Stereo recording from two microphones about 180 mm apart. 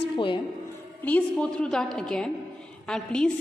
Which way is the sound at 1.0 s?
5° left (ahead or behind).